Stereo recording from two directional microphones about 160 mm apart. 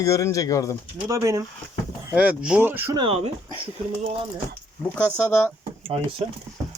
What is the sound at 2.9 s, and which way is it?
Speech, 35° right (ahead or behind).